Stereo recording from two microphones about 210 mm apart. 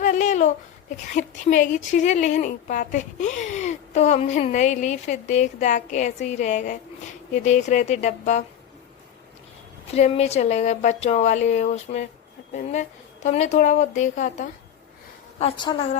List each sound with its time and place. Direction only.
0.0 s speech: 35° left (ahead or behind)
9.9 s speech: 30° left (ahead or behind)
12.4 s a sound: 45° left (ahead or behind)
13.2 s speech: 35° left (ahead or behind)
15.4 s a woman's voice: 25° left (ahead or behind)